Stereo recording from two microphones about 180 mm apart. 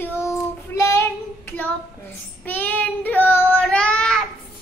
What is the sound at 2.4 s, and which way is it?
Child singing, 10° left (ahead or behind).